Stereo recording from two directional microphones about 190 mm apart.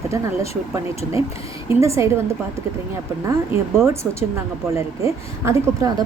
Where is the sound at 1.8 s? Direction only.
15° right (ahead or behind).